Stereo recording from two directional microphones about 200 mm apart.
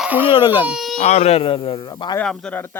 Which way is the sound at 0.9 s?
35° left (ahead or behind).